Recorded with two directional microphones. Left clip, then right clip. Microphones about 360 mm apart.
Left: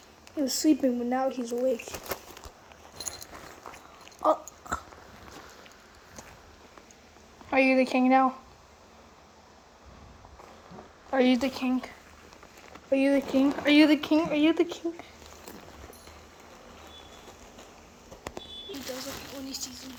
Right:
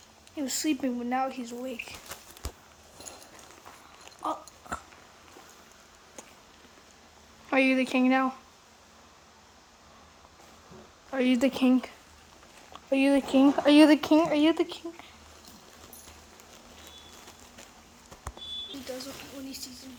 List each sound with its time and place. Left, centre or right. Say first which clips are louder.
0.3 s speech: left 5 dB; centre
1.5 s speech: left 9 dB; right
4.0 s dog: left 8 dB; centre
7.5 s speech: left 2 dB; centre
11.1 s speech: left 2 dB; centre
12.9 s speech: even; centre
19.5 s speech: left 6 dB; centre